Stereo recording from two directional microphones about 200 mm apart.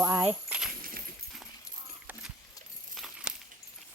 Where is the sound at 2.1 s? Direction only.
5° right (ahead or behind).